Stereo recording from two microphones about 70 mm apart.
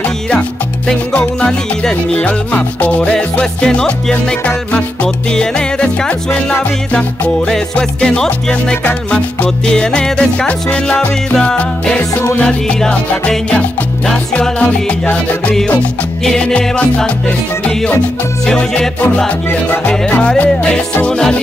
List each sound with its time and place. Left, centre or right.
1.1 s music: centre
18.4 s music: centre